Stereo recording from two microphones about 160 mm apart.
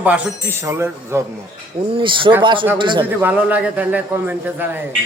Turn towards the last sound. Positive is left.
turn(degrees=-10)  # may be behind; listen again after turning